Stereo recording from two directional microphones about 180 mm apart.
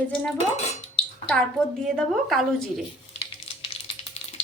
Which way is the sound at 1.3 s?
5° left (ahead or behind).